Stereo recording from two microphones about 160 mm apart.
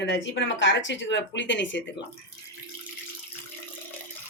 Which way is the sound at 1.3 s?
90° left.